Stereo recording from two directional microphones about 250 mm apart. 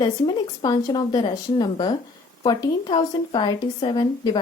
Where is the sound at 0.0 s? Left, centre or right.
Centre.